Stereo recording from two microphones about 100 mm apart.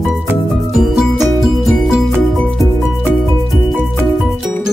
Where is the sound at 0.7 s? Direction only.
Centre (ahead or behind).